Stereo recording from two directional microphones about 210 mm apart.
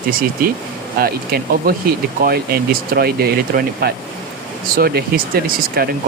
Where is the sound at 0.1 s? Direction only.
45° right (ahead or behind).